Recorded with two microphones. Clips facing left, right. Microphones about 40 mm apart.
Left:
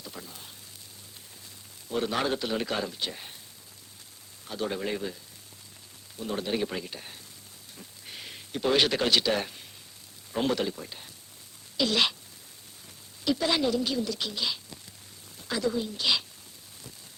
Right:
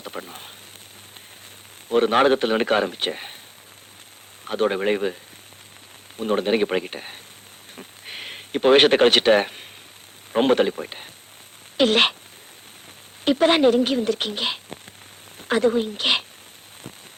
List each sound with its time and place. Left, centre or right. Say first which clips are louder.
0.0 s speech: right 9 dB; right
1.9 s speech: right 11 dB; right
4.4 s speech: right 10 dB; right
6.1 s speech: right 10 dB; right
7.8 s a sound: right 8 dB; right
10.3 s speech: right 10 dB; right
13.2 s speech: right 10 dB; right